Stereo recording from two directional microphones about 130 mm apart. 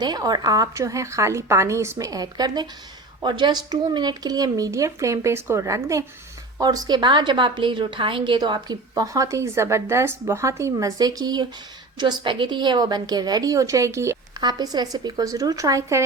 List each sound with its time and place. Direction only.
0.0 s a woman's voice: 30° right (ahead or behind)